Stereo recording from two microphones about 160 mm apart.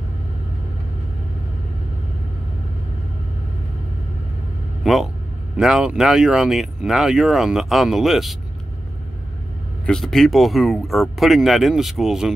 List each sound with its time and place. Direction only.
4.8 s speech: centre (ahead or behind)
9.8 s speech: centre (ahead or behind)